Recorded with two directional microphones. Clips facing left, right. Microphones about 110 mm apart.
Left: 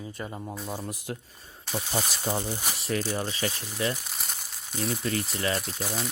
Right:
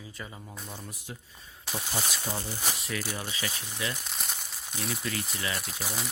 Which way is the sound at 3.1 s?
40° left (ahead or behind).